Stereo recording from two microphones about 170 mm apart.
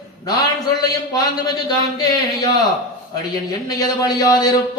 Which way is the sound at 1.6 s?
25° left (ahead or behind).